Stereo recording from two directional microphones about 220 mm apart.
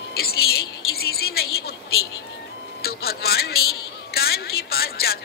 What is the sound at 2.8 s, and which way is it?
Music, 45° left (ahead or behind).